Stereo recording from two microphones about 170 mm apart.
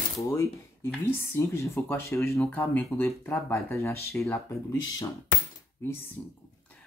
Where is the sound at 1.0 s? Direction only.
15° left (ahead or behind).